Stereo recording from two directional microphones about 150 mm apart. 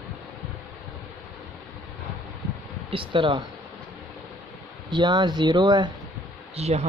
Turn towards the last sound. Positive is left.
turn(degrees=-45)  # may be behind; listen again after turning